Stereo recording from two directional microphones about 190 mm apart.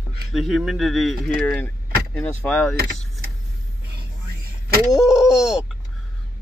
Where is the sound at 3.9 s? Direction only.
55° right (ahead or behind).